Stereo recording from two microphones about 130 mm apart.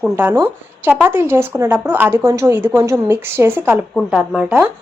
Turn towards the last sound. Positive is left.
turn(degrees=-10)  # may be behind; listen again after turning